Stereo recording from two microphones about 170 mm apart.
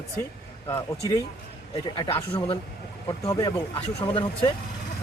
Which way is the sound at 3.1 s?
20° left (ahead or behind).